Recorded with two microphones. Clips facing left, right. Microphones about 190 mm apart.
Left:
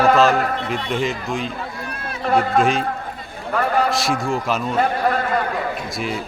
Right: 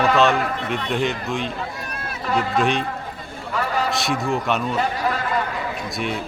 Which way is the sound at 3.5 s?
55° left (ahead or behind).